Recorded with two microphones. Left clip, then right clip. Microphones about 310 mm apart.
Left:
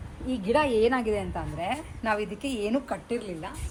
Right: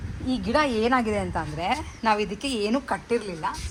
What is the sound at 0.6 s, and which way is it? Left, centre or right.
A woman's voice, centre.